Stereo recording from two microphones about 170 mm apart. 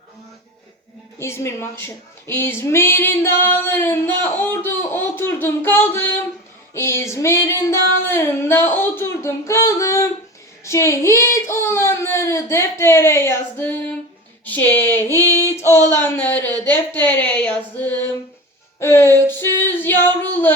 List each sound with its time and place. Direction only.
1.2 s speech: 15° left (ahead or behind)
18.8 s music: 15° left (ahead or behind)
19.3 s female singing: 10° left (ahead or behind)